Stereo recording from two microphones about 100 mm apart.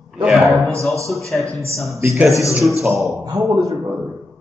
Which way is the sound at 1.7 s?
Centre (ahead or behind).